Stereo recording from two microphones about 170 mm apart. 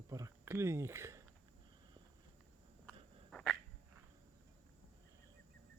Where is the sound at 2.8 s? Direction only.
5° left (ahead or behind).